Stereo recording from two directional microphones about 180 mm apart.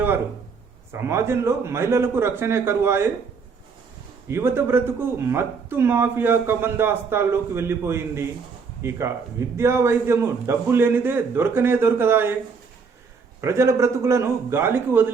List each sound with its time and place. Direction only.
0.9 s speech: 15° right (ahead or behind)
4.3 s speech: 15° right (ahead or behind)
13.4 s speech: 15° right (ahead or behind)